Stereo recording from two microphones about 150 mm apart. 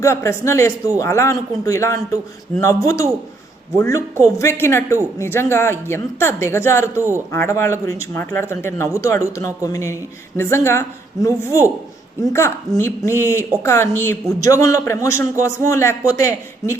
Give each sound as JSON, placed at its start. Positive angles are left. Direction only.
{"t": 0.0, "sound": "a man's voice", "side_deg": 20}